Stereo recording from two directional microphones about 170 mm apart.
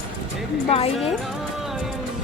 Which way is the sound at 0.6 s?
35° left (ahead or behind).